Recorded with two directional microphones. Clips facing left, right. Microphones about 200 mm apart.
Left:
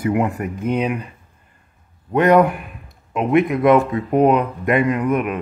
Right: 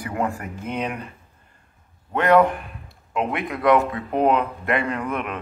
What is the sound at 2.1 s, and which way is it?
Speech, 20° left (ahead or behind).